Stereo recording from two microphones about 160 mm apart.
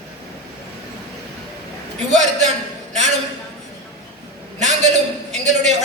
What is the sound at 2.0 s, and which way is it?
Speech, 45° right (ahead or behind).